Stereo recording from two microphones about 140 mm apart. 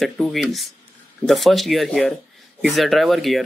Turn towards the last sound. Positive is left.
turn(degrees=0)  # may be behind; listen again after turning